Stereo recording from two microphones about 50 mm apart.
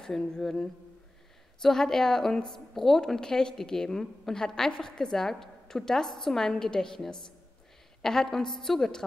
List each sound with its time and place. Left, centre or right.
0.0 s a woman's voice: centre